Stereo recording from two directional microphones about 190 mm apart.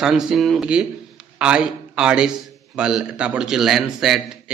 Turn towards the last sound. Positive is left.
turn(degrees=0)  # may be behind; listen again after turning